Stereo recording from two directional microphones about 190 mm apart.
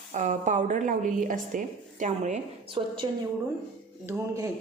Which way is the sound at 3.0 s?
25° right (ahead or behind).